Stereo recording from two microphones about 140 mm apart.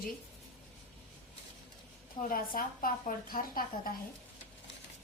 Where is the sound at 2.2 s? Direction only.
80° left.